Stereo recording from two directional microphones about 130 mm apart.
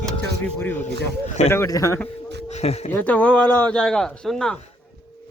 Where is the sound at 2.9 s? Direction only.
15° left (ahead or behind).